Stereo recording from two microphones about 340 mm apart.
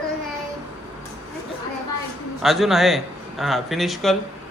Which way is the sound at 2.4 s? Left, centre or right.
Centre.